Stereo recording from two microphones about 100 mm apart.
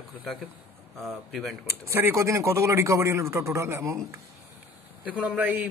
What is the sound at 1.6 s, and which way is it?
Speech, 25° right (ahead or behind).